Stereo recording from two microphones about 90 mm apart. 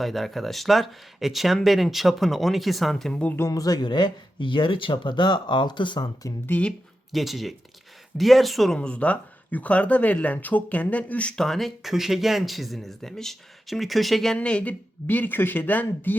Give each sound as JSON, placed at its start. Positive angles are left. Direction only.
{"t": 0.0, "sound": "speech", "side_deg": 0}
{"t": 3.5, "sound": "speech", "side_deg": 45}
{"t": 3.8, "sound": "speech", "side_deg": 55}
{"t": 6.4, "sound": "speech", "side_deg": 15}
{"t": 7.1, "sound": "speech", "side_deg": 0}
{"t": 14.3, "sound": "speech", "side_deg": 15}